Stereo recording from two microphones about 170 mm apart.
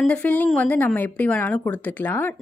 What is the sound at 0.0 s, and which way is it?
Speech, 10° left (ahead or behind).